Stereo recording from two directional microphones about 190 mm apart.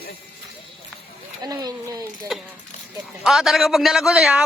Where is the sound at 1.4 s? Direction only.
20° right (ahead or behind).